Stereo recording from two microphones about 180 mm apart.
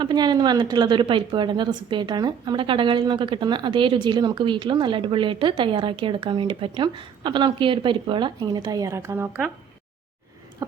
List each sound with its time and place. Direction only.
0.0 s a woman's voice: 25° right (ahead or behind)
10.6 s a woman's voice: 20° right (ahead or behind)